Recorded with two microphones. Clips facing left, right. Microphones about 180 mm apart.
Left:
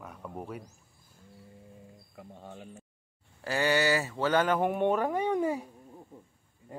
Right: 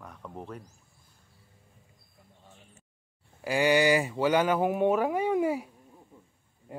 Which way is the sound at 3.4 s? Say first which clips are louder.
Right 4 dB; 15° right (ahead or behind).